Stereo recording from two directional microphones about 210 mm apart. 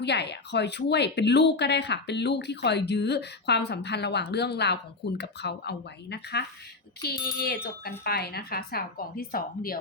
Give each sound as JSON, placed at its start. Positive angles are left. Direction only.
{"t": 0.0, "sound": "speech", "side_deg": 55}